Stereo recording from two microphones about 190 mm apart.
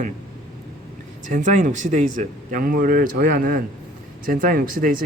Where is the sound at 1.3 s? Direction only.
40° right (ahead or behind).